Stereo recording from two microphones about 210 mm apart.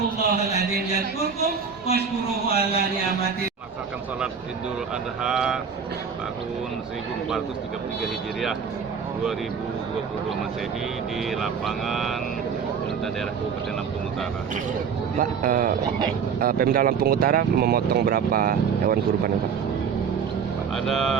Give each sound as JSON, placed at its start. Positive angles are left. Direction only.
{"t": 1.9, "sound": "a man's voice", "side_deg": 30}
{"t": 5.2, "sound": "speech", "side_deg": -5}
{"t": 11.3, "sound": "speech", "side_deg": 0}
{"t": 15.2, "sound": "speech", "side_deg": -40}
{"t": 20.7, "sound": "speech", "side_deg": 0}